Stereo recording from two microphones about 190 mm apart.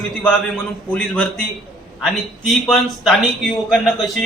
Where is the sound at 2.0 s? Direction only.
Centre (ahead or behind).